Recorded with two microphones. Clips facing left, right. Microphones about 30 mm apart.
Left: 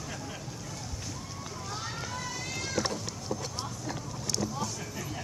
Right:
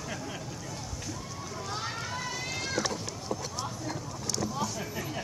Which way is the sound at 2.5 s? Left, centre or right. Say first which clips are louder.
Right 2 dB; centre.